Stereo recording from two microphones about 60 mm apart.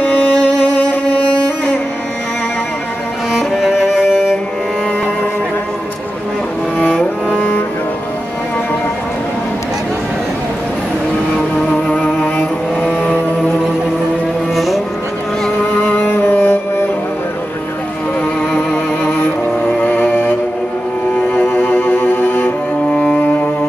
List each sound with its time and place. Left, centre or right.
0.1 s music: left
3.3 s music: centre
6.8 s cello: centre
11.7 s music: left
14.5 s vehicle: centre
16.1 s music: left
19.8 s music: left
21.4 s cello: left